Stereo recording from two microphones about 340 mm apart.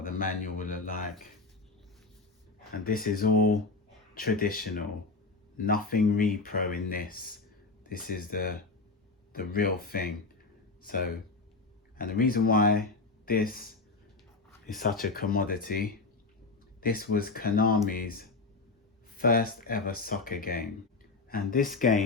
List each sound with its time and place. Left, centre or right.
0.0 s speech: left
2.8 s speech: left
11.9 s speech: left
14.7 s speech: left